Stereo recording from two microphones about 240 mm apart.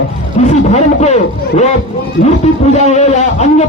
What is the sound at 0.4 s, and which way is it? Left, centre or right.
Speech, left.